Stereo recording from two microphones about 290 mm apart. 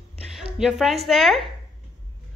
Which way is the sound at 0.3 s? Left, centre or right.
Centre.